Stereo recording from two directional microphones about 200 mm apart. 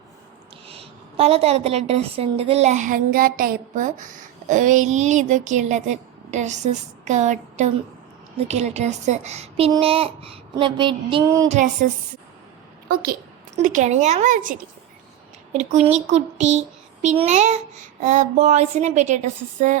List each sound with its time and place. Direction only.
0.7 s a woman's voice: 30° right (ahead or behind)
9.7 s child singing: 30° right (ahead or behind)
11.4 s a woman's voice: 35° right (ahead or behind)
12.9 s a woman's voice: 50° right (ahead or behind)
15.5 s a woman's voice: 35° right (ahead or behind)